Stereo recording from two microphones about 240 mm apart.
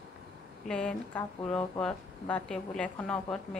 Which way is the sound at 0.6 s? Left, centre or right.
Centre.